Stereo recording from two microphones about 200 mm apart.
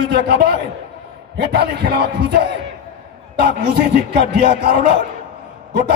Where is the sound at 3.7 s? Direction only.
55° right (ahead or behind).